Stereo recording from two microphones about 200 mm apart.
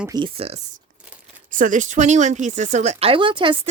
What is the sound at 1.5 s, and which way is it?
Speech, 40° right (ahead or behind).